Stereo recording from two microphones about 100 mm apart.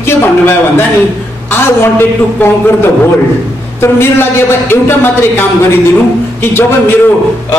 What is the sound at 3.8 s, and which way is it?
A man's voice, 25° left (ahead or behind).